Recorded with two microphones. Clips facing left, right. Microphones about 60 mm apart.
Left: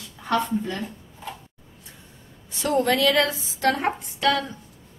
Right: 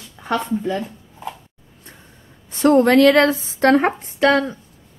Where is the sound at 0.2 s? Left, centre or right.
Right.